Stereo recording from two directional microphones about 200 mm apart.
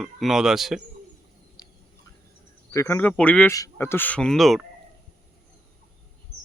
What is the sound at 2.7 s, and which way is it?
Speech, 15° left (ahead or behind).